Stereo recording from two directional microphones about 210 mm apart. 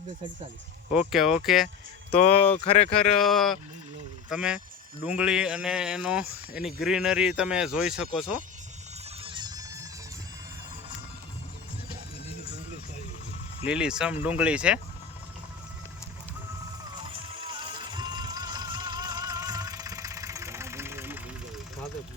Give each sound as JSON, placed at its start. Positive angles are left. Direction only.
{"t": 0.9, "sound": "speech", "side_deg": 0}
{"t": 2.1, "sound": "speech", "side_deg": 30}
{"t": 3.2, "sound": "speech", "side_deg": 0}
{"t": 9.2, "sound": "music", "side_deg": -20}
{"t": 13.7, "sound": "speech", "side_deg": -5}
{"t": 17.2, "sound": "music", "side_deg": -20}